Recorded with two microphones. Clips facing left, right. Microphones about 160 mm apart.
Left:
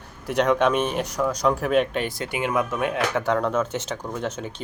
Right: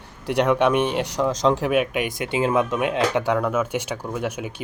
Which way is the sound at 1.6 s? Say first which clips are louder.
Even; 10° right (ahead or behind).